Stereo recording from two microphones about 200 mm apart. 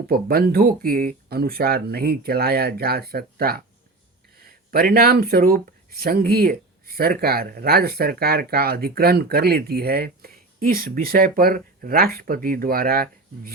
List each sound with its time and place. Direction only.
0.1 s speech: 50° right (ahead or behind)